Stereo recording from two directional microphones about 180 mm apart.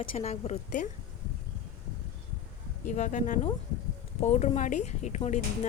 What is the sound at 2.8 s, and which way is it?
A woman's voice, 45° left (ahead or behind).